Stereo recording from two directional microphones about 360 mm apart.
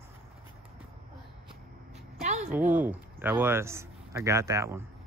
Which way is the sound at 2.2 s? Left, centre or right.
Centre.